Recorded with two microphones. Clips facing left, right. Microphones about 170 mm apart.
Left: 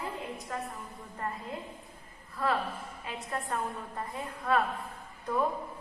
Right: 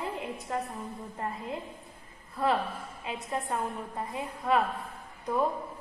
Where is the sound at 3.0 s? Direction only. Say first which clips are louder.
Right 3 dB; 15° right (ahead or behind).